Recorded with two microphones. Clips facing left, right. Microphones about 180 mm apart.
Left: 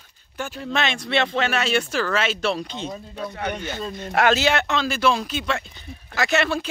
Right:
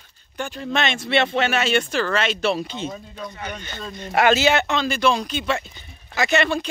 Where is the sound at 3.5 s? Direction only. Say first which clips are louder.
Left 4 dB; 10° left (ahead or behind).